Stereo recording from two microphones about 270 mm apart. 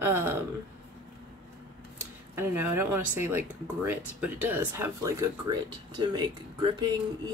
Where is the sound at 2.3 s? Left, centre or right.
Centre.